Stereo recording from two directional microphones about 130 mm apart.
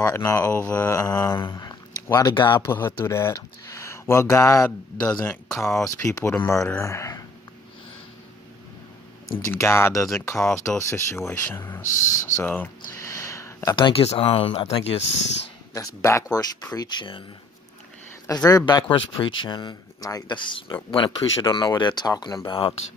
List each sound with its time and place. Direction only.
0.0 s speech: 20° left (ahead or behind)
2.6 s speech: 20° left (ahead or behind)
9.4 s speech: 20° left (ahead or behind)
12.4 s a sound: 15° left (ahead or behind)
13.7 s speech: 40° left (ahead or behind)
15.7 s speech: 25° left (ahead or behind)
18.2 s speech: 25° left (ahead or behind)
22.5 s speech: 40° left (ahead or behind)